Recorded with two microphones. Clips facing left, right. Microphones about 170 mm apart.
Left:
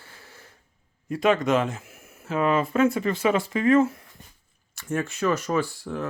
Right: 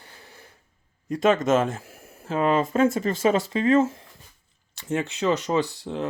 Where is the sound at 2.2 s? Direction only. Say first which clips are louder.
Right 1 dB; 30° right (ahead or behind).